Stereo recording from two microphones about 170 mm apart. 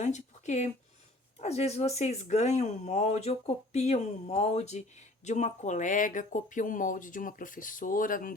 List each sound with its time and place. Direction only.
0.0 s speech: 45° left (ahead or behind)